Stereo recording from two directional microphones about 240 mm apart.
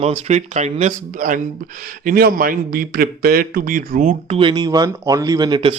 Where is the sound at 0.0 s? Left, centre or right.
Right.